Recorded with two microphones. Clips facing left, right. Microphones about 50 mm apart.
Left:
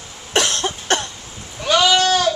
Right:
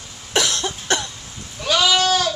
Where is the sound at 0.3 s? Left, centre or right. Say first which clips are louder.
Left 2 dB; left.